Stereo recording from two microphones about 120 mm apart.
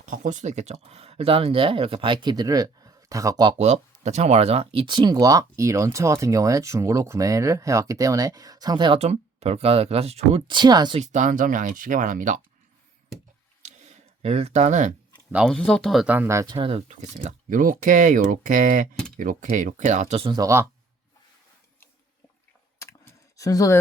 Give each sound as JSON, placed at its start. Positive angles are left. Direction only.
{"t": 0.0, "sound": "speech", "side_deg": -90}
{"t": 3.6, "sound": "speech", "side_deg": -70}
{"t": 9.0, "sound": "speech", "side_deg": -60}
{"t": 10.9, "sound": "speech", "side_deg": -80}
{"t": 13.6, "sound": "a sound", "side_deg": -75}
{"t": 15.4, "sound": "speech", "side_deg": 5}
{"t": 16.0, "sound": "speech", "side_deg": -15}
{"t": 16.6, "sound": "speech", "side_deg": -50}
{"t": 17.2, "sound": "speech", "side_deg": -90}
{"t": 20.3, "sound": "speech", "side_deg": -25}
{"t": 22.8, "sound": "a sound", "side_deg": 25}